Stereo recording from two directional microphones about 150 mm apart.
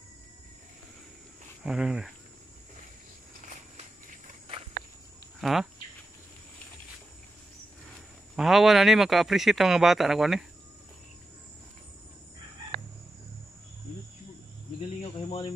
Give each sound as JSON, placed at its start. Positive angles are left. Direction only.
{"t": 1.6, "sound": "a man's voice", "side_deg": -5}
{"t": 5.4, "sound": "speech", "side_deg": 0}
{"t": 8.4, "sound": "a man's voice", "side_deg": 0}
{"t": 15.2, "sound": "cricket", "side_deg": 40}